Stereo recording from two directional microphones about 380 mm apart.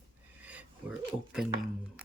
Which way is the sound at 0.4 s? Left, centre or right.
Centre.